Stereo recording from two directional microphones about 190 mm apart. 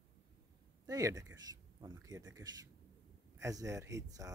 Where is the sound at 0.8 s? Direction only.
15° right (ahead or behind).